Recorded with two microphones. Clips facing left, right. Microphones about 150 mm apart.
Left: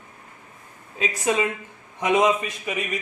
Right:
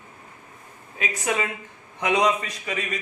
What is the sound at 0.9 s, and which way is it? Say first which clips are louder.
A woman's voice: left 3 dB; 30° left (ahead or behind).